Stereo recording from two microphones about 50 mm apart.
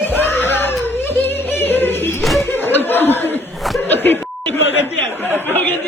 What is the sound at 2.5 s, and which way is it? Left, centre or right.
Laughter, left.